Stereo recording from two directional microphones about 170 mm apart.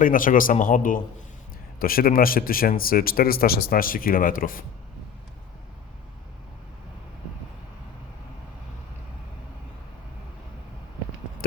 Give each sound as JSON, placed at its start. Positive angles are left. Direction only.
{"t": 0.0, "sound": "a man's voice", "side_deg": 55}